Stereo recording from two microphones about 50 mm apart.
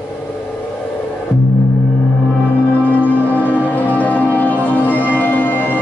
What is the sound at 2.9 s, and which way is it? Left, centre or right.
Music, left.